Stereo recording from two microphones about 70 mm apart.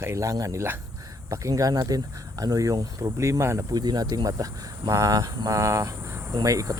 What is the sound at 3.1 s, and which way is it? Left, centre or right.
Speech, right.